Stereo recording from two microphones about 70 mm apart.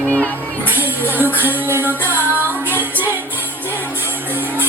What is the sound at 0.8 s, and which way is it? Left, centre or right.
Music, right.